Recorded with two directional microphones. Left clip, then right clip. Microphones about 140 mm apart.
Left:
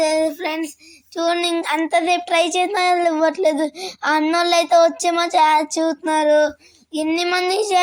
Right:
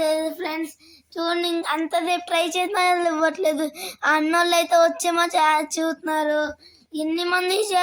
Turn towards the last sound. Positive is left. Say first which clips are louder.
# left 4 dB
turn(degrees=10)  # may be behind; listen again after turning